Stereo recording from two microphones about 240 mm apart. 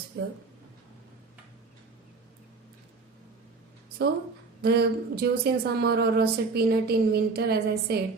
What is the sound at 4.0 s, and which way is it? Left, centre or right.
A woman's voice, right.